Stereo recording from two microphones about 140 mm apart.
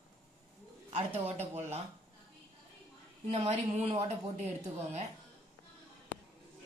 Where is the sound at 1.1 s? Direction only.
15° right (ahead or behind).